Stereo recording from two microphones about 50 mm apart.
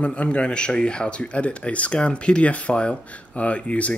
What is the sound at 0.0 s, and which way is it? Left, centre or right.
A man's voice, left.